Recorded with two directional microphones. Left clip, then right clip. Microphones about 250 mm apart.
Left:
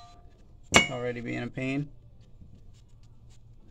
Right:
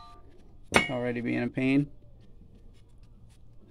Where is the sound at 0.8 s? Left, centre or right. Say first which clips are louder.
Right 2 dB; right.